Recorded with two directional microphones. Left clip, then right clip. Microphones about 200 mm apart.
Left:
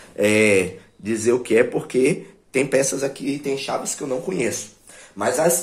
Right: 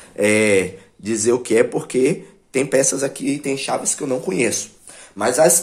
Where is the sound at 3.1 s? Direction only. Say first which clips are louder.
Right 2 dB; 35° right (ahead or behind).